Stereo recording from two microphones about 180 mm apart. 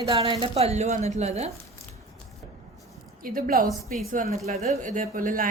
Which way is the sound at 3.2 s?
50° right (ahead or behind).